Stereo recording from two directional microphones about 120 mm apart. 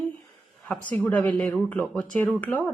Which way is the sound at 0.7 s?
15° left (ahead or behind).